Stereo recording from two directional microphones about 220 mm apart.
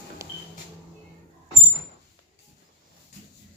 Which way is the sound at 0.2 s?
15° right (ahead or behind).